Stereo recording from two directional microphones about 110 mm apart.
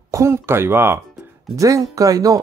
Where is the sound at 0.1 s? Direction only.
25° right (ahead or behind).